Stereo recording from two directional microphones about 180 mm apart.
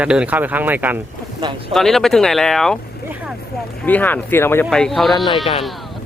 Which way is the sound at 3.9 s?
10° left (ahead or behind).